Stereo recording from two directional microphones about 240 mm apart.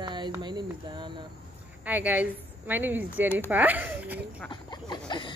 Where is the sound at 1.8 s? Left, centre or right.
Centre.